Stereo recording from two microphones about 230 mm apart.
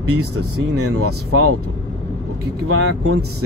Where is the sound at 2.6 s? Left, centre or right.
Right.